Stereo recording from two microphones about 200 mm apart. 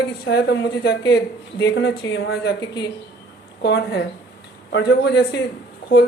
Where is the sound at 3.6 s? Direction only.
55° left (ahead or behind).